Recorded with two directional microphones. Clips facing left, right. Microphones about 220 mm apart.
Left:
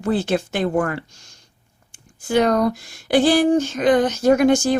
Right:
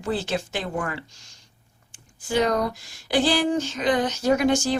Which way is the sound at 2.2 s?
55° left (ahead or behind).